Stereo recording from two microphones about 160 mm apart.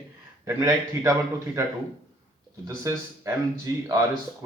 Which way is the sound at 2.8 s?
20° right (ahead or behind).